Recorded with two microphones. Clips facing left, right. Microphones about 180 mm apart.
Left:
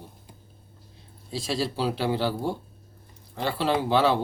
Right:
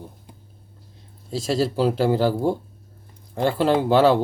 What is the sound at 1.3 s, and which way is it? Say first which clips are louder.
Speech: right 6 dB; 45° right (ahead or behind).